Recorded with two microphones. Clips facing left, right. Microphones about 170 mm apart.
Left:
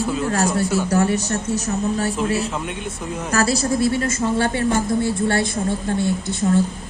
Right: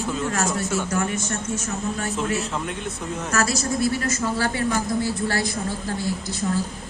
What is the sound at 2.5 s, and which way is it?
Speech, 10° left (ahead or behind).